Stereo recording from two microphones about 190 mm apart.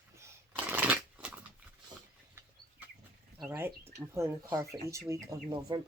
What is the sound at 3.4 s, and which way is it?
Speech, 15° right (ahead or behind).